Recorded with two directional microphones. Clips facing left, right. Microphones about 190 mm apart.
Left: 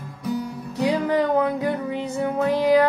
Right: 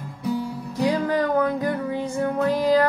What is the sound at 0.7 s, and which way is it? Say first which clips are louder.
Music: left 1 dB; 15° left (ahead or behind).